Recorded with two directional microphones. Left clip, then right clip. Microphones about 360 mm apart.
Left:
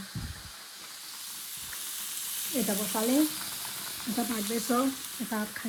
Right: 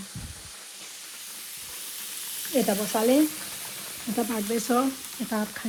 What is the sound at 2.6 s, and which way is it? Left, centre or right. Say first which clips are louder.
Speech: right 3 dB; right.